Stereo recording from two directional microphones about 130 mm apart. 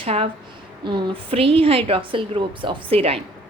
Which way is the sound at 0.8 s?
35° right (ahead or behind).